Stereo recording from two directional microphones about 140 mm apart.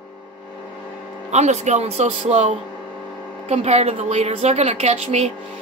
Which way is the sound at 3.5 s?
50° right (ahead or behind).